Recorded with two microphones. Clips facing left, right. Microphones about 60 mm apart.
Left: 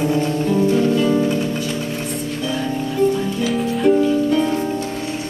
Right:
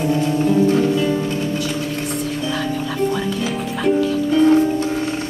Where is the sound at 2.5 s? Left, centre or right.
Right.